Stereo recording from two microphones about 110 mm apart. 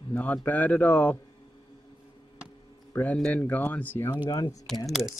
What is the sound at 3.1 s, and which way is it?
Speech, 10° left (ahead or behind).